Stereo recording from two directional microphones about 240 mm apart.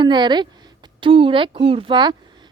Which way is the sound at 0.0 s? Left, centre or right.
Centre.